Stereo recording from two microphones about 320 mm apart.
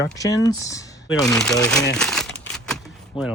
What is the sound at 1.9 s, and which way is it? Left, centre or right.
Crumpling, centre.